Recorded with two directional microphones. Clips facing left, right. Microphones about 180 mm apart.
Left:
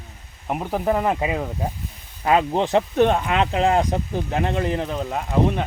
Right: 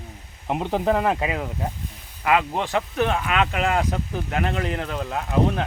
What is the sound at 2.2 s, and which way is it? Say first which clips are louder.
Speech: left 3 dB; 30° left (ahead or behind).